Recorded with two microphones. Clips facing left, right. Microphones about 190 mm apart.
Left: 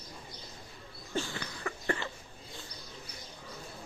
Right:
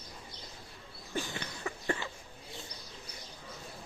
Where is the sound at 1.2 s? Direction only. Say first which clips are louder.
Left 2 dB; 20° right (ahead or behind).